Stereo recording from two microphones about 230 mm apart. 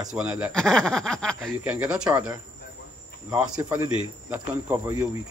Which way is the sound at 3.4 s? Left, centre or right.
Centre.